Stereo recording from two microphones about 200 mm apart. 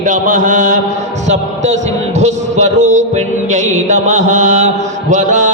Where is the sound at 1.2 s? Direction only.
35° right (ahead or behind).